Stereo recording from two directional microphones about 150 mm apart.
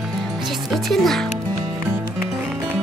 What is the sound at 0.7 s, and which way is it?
Music, centre (ahead or behind).